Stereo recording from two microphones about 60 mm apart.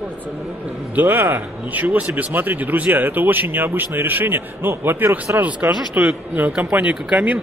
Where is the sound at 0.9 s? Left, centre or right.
Right.